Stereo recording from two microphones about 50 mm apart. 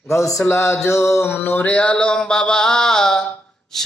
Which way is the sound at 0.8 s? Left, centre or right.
Left.